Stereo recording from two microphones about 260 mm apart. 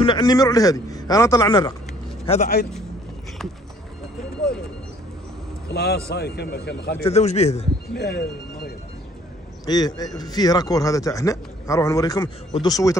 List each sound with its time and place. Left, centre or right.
0.0 s a man's voice: centre
5.7 s speech: left
7.0 s speech: left
7.9 s speech: left
9.7 s a man's voice: centre